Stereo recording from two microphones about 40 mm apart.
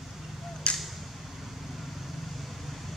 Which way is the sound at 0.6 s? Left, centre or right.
Left.